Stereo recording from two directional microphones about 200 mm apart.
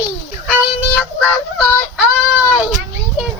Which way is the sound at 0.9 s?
Centre (ahead or behind).